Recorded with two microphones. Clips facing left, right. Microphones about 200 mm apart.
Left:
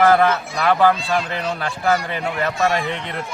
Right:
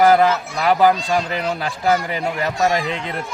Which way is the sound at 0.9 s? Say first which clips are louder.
Right 1 dB; 40° right (ahead or behind).